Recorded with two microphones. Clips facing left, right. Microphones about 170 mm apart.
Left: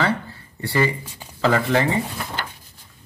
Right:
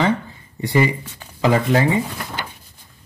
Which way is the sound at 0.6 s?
15° right (ahead or behind).